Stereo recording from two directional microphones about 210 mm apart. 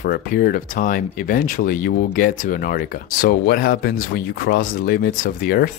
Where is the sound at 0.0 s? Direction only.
45° left (ahead or behind).